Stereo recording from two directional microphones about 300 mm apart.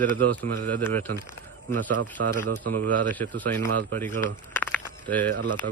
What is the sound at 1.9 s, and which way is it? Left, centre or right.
Speech, right.